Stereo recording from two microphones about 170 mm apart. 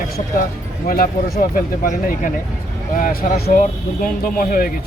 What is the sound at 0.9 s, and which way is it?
Speech, 55° left (ahead or behind).